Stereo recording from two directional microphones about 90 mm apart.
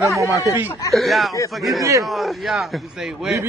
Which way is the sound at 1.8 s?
40° right (ahead or behind).